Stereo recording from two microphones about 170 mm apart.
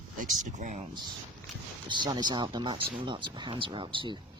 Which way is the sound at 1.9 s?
25° right (ahead or behind).